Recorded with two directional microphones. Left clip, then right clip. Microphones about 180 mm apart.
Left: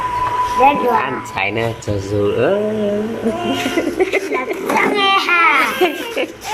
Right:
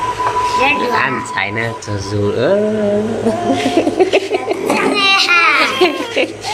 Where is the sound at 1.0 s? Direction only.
10° left (ahead or behind).